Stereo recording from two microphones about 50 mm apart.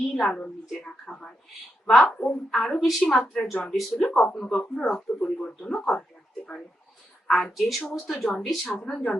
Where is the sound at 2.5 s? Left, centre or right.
Centre.